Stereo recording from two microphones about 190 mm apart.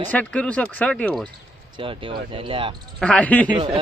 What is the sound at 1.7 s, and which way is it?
Speech, 25° right (ahead or behind).